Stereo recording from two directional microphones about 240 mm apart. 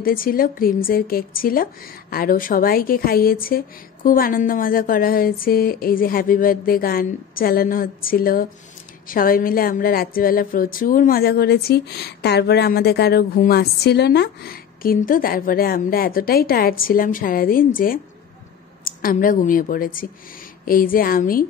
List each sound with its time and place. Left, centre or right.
0.0 s speech: left